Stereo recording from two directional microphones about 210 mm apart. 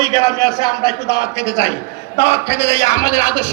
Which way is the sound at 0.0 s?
15° left (ahead or behind).